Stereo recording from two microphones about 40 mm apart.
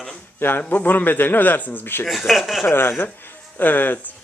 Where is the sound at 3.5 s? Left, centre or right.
Left.